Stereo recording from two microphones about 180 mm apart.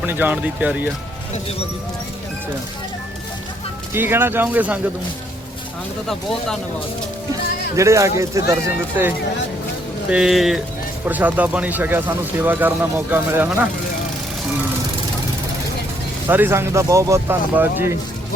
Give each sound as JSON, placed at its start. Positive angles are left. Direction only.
{"t": 0.0, "sound": "speech", "side_deg": -10}
{"t": 3.9, "sound": "speech", "side_deg": -10}
{"t": 7.8, "sound": "speech", "side_deg": -15}
{"t": 10.1, "sound": "speech", "side_deg": -5}
{"t": 16.3, "sound": "speech", "side_deg": -10}